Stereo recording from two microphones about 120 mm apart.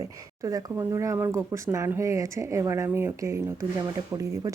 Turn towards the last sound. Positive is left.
turn(degrees=-30)  # may be behind; listen again after turning